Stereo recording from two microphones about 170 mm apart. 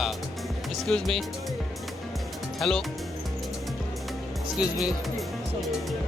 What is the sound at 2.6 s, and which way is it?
Speech, centre (ahead or behind).